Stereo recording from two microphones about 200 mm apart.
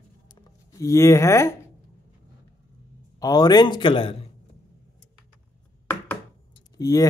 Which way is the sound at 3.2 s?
20° left (ahead or behind).